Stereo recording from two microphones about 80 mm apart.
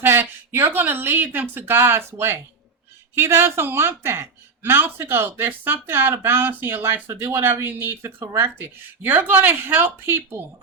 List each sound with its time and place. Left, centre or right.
0.0 s speech: right